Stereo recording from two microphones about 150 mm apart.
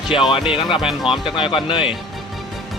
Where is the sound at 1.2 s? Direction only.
35° left (ahead or behind).